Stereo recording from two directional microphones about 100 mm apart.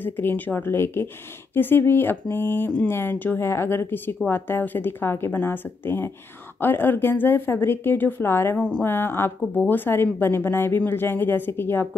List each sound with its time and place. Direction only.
0.0 s a woman's voice: 20° left (ahead or behind)
8.5 s speech: 10° left (ahead or behind)
8.8 s a woman's voice: 20° left (ahead or behind)